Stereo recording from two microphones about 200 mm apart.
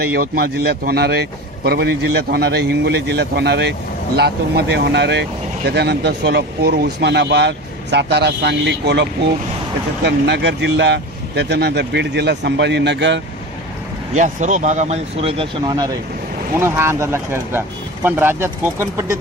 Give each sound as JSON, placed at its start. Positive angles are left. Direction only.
{"t": 0.0, "sound": "a man's voice", "side_deg": -50}
{"t": 14.1, "sound": "speech", "side_deg": -35}